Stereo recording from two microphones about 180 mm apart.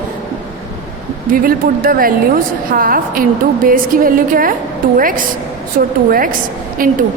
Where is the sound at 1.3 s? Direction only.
50° right (ahead or behind).